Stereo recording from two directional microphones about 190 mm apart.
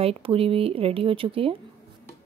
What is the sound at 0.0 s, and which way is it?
Speech, 30° right (ahead or behind).